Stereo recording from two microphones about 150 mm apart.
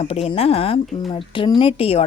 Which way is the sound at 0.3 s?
40° left (ahead or behind).